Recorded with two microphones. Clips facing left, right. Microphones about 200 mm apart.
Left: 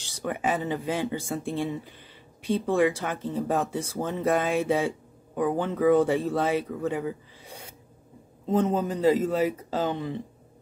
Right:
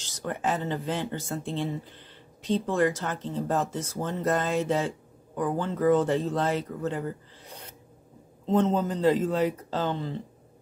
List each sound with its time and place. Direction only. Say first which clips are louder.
0.0 s speech: left 1 dB; 10° left (ahead or behind)